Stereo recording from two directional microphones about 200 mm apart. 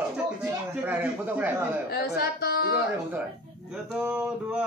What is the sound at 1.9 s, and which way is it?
Speech, 50° left (ahead or behind).